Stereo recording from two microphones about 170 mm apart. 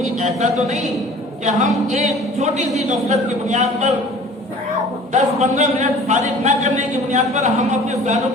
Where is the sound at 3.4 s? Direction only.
40° right (ahead or behind).